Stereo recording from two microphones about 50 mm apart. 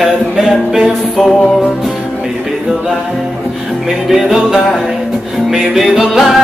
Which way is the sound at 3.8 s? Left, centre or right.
Centre.